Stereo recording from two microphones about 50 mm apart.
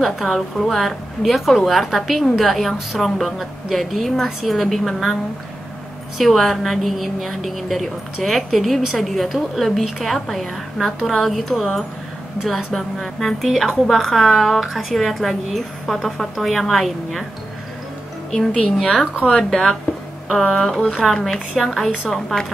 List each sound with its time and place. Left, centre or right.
0.0 s a woman's voice: centre
6.1 s a woman's voice: centre
18.3 s speech: centre
21.0 s a woman's voice: centre